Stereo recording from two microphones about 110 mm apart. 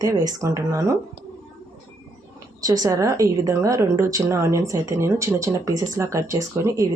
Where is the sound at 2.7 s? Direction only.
35° right (ahead or behind).